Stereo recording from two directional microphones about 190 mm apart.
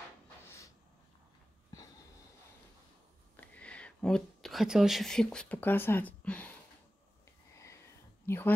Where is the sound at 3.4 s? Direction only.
5° left (ahead or behind).